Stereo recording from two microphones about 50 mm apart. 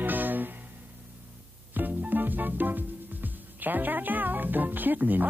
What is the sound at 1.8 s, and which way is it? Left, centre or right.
Music, right.